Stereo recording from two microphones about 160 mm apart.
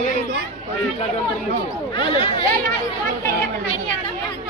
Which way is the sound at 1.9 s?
30° left (ahead or behind).